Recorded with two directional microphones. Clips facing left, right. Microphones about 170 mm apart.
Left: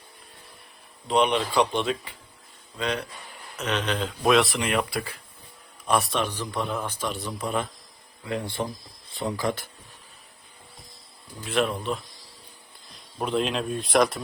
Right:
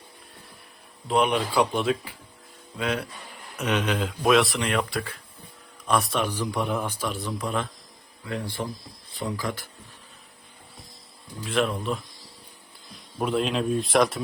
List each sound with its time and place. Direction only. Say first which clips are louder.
1.0 s speech: even; 5° right (ahead or behind)
6.1 s speech: right 1 dB; 10° right (ahead or behind)
7.1 s speech: even; centre (ahead or behind)
8.3 s speech: left 2 dB; 20° left (ahead or behind)
11.4 s speech: even; centre (ahead or behind)
13.1 s speech: right 1 dB; centre (ahead or behind)